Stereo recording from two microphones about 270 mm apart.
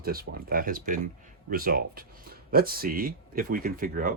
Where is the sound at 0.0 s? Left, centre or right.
Right.